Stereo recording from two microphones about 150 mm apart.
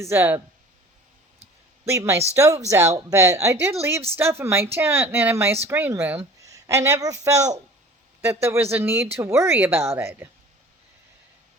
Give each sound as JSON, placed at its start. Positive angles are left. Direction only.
{"t": 0.0, "sound": "speech", "side_deg": -15}
{"t": 1.8, "sound": "a woman's voice", "side_deg": -20}